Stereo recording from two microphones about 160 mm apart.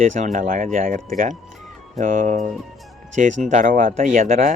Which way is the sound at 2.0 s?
55° right (ahead or behind).